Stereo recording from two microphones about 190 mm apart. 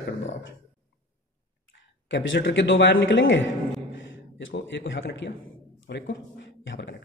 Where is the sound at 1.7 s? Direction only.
75° left (ahead or behind).